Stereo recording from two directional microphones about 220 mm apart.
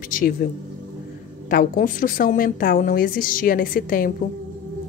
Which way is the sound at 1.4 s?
40° left (ahead or behind).